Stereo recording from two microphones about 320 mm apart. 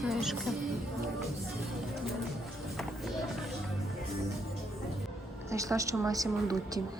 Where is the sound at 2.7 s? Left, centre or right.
Centre.